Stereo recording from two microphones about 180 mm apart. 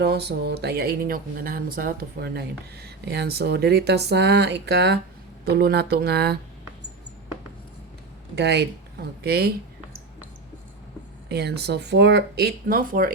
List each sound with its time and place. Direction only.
0.0 s speech: 65° right (ahead or behind)
8.4 s speech: 70° right (ahead or behind)
11.3 s speech: 65° right (ahead or behind)